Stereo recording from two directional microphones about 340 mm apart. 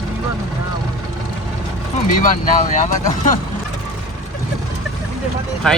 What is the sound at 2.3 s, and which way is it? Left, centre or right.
Speech, left.